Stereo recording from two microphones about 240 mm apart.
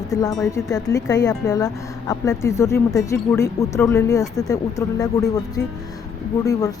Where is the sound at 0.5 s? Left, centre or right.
Centre.